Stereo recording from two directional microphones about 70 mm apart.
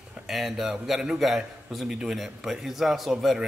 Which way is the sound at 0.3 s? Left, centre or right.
Centre.